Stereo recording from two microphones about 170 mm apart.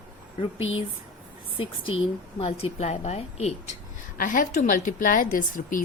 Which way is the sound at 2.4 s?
35° left (ahead or behind).